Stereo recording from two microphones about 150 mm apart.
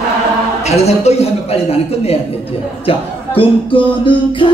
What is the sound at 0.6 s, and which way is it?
A man's voice, 45° left (ahead or behind).